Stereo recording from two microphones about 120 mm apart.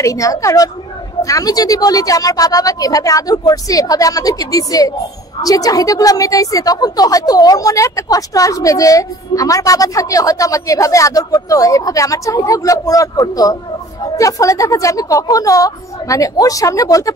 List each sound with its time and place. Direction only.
0.0 s a woman's voice: 25° left (ahead or behind)